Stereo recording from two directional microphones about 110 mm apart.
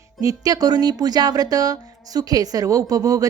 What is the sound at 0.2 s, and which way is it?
Speech, 35° right (ahead or behind).